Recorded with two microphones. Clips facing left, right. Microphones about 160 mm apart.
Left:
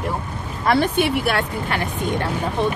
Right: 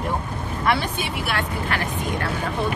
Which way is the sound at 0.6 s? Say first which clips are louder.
Left 6 dB; 55° left (ahead or behind).